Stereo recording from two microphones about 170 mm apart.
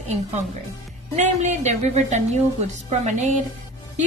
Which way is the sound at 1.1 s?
45° right (ahead or behind).